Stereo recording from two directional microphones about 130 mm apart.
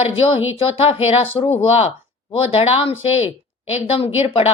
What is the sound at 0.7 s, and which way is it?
A woman's voice, 50° left (ahead or behind).